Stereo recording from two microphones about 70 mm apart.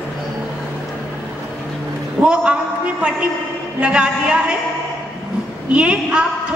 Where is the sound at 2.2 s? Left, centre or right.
Centre.